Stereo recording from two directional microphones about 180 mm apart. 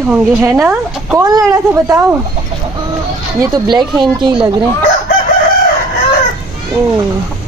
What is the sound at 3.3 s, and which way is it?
Speech, 20° right (ahead or behind).